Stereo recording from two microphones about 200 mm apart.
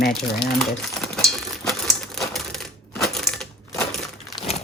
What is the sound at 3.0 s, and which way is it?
Crushing, centre (ahead or behind).